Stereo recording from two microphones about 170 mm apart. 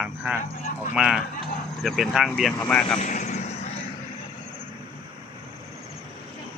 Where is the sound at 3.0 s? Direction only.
45° left (ahead or behind).